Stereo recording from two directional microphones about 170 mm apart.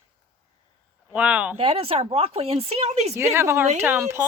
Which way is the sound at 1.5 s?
35° right (ahead or behind).